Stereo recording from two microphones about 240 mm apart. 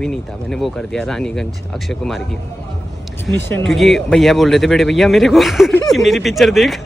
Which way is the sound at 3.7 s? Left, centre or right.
Centre.